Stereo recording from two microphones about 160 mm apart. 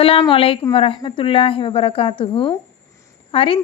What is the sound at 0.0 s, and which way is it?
Speech, 35° left (ahead or behind).